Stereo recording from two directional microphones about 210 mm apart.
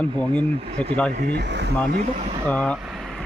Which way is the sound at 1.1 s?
50° right (ahead or behind).